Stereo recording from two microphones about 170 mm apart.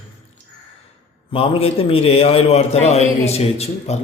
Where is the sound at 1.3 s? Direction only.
35° left (ahead or behind).